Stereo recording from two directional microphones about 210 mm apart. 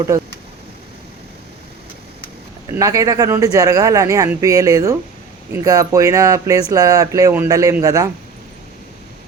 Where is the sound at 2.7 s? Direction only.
15° right (ahead or behind).